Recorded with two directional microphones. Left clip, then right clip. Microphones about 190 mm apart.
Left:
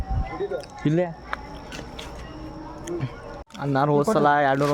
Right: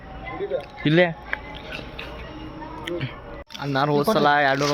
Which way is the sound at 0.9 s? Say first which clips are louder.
Right 8 dB; centre (ahead or behind).